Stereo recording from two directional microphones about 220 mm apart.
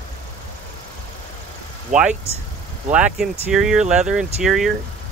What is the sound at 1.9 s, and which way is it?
Speech, 35° right (ahead or behind).